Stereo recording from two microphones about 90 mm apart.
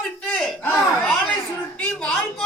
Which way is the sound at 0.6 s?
30° left (ahead or behind).